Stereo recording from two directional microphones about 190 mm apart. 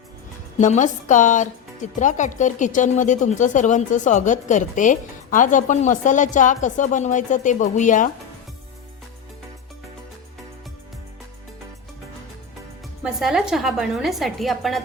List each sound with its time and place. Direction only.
0.6 s speech: 40° left (ahead or behind)
13.0 s a woman's voice: centre (ahead or behind)